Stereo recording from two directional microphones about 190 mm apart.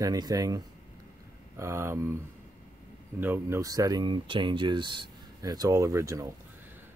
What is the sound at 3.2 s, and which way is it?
Speech, 10° right (ahead or behind).